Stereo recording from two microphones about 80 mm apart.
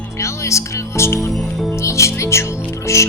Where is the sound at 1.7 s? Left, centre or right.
Left.